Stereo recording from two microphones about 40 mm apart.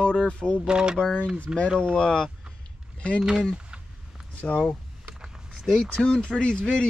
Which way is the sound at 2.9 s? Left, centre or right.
Left.